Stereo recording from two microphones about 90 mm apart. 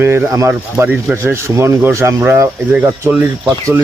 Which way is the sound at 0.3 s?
35° right (ahead or behind).